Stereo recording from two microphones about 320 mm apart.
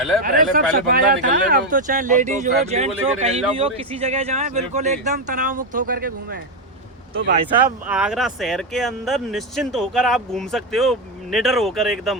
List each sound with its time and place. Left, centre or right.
0.2 s speech: right
7.9 s speech: centre